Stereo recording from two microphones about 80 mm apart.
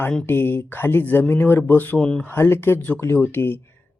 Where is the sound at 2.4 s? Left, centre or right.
Left.